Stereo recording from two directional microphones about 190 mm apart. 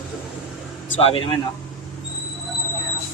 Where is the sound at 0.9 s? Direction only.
30° left (ahead or behind).